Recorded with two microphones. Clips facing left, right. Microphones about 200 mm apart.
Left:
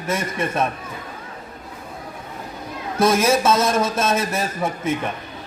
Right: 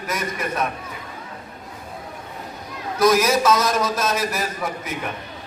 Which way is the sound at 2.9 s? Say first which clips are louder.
Even; 25° left (ahead or behind).